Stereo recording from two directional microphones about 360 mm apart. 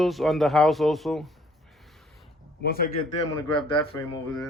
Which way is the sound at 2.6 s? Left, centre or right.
Left.